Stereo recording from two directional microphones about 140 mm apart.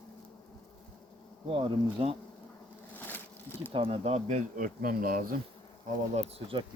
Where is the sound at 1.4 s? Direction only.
40° right (ahead or behind).